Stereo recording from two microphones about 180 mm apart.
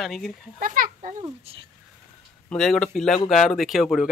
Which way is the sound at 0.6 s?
50° right (ahead or behind).